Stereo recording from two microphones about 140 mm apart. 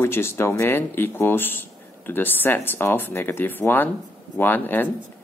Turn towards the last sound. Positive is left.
turn(degrees=15)  # may be behind; listen again after turning